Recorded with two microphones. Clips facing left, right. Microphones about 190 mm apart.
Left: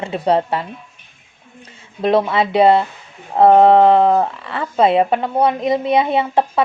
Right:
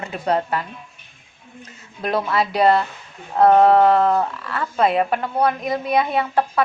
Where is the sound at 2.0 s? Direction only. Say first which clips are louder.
Left 6 dB; 25° left (ahead or behind).